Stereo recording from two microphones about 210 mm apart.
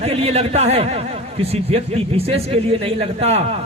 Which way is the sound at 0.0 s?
30° right (ahead or behind).